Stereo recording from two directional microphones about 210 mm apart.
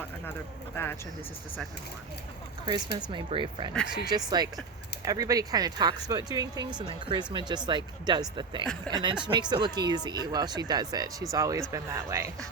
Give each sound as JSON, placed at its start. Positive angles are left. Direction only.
{"t": 0.8, "sound": "speech", "side_deg": 10}
{"t": 3.1, "sound": "speech", "side_deg": -25}